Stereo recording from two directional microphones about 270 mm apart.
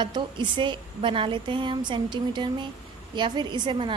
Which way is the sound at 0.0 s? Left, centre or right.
Centre.